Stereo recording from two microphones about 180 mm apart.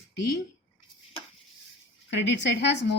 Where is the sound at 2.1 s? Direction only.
75° left (ahead or behind).